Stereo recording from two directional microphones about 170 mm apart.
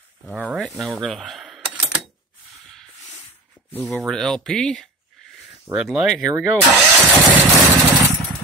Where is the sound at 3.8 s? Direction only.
Centre (ahead or behind).